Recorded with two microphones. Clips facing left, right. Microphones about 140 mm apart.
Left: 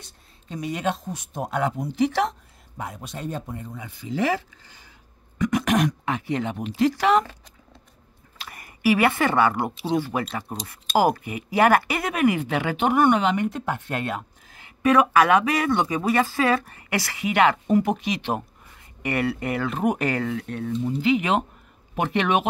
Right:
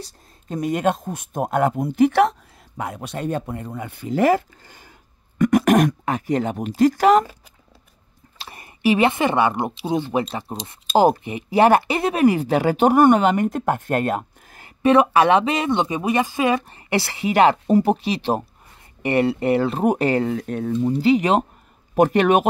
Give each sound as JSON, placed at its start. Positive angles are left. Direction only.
{"t": 0.0, "sound": "speech", "side_deg": -45}
{"t": 8.4, "sound": "speech", "side_deg": -25}
{"t": 14.8, "sound": "speech", "side_deg": -30}
{"t": 20.3, "sound": "speech", "side_deg": -45}